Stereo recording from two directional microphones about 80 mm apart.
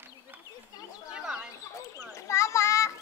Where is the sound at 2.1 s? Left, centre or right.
Left.